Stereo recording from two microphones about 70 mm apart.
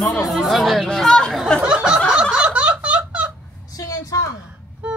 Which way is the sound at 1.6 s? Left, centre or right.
Centre.